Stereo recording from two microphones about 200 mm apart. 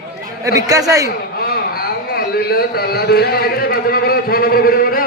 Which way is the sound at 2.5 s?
50° left (ahead or behind).